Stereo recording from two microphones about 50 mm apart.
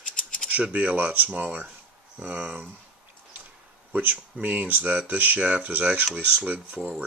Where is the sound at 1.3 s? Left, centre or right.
Right.